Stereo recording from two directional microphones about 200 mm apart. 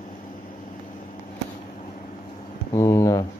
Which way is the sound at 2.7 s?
15° left (ahead or behind).